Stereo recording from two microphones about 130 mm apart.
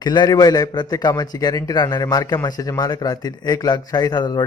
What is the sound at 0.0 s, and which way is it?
A man's voice, 35° left (ahead or behind).